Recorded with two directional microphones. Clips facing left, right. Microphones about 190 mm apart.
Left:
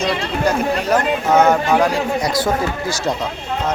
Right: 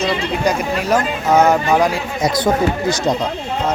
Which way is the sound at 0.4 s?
10° right (ahead or behind).